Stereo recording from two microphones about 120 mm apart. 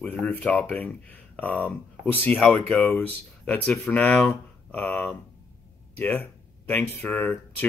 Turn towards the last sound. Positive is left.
turn(degrees=15)  # may be behind; listen again after turning